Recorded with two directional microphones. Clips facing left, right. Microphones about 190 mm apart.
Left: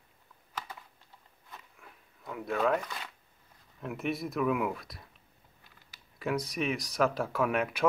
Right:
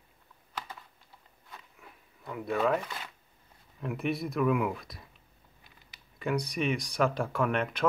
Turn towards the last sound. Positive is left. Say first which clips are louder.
# even
turn(degrees=10)  # may be behind; listen again after turning